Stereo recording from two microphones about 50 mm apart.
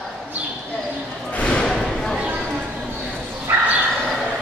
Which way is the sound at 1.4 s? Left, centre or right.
Left.